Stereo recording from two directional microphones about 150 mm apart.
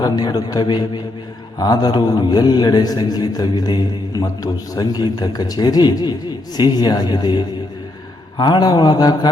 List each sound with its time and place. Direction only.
0.0 s a man's voice: 25° left (ahead or behind)